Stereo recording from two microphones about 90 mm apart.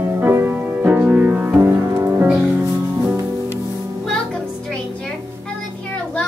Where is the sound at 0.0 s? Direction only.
25° right (ahead or behind).